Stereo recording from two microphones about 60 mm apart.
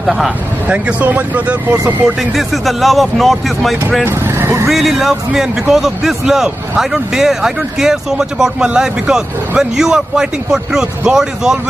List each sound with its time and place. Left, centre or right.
0.0 s speech: centre
0.7 s speech: right
2.0 s a man's voice: centre
4.0 s speech: right
4.6 s a man's voice: centre